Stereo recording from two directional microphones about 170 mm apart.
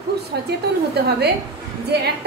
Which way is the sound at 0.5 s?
75° right (ahead or behind).